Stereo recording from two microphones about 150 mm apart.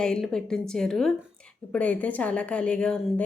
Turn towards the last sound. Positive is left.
turn(degrees=5)  # may be behind; listen again after turning